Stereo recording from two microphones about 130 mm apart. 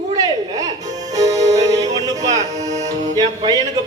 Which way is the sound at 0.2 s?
30° right (ahead or behind).